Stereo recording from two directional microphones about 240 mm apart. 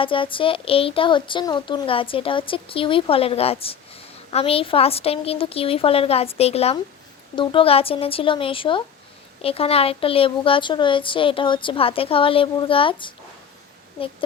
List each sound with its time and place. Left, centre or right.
0.0 s a woman's voice: left